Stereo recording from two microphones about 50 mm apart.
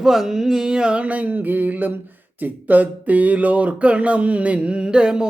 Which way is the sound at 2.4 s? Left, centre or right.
Right.